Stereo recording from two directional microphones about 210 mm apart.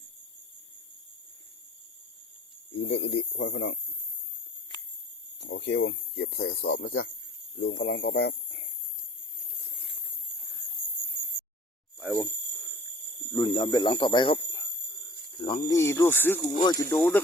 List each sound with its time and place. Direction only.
2.7 s speech: 60° left (ahead or behind)
5.4 s speech: 55° left (ahead or behind)
11.9 s speech: 10° right (ahead or behind)
13.3 s speech: 20° left (ahead or behind)
15.7 s speech: 10° left (ahead or behind)